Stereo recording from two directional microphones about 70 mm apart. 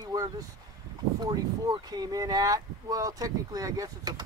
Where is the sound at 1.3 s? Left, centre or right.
Right.